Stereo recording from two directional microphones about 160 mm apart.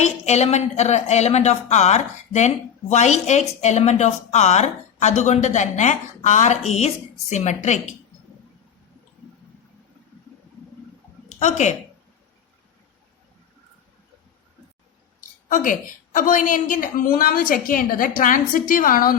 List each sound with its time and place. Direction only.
0.0 s a woman's voice: 45° left (ahead or behind)
11.3 s speech: 45° left (ahead or behind)
15.4 s a woman's voice: 55° left (ahead or behind)